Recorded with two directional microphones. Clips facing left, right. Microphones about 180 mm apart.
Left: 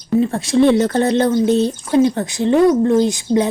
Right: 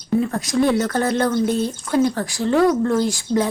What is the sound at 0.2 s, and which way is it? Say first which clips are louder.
Speech: left 7 dB; 25° left (ahead or behind).